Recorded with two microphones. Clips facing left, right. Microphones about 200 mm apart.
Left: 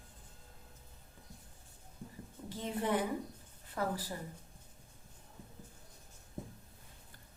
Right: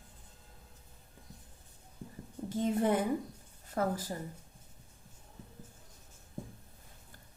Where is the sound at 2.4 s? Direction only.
40° right (ahead or behind).